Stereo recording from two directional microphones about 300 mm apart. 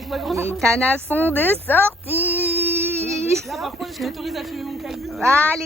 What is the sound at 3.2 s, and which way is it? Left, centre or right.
Speech, centre.